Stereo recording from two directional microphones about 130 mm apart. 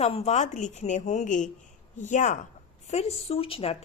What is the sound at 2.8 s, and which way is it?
Speech, 55° left (ahead or behind).